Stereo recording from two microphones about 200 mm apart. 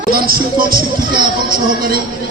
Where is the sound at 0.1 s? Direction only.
50° right (ahead or behind).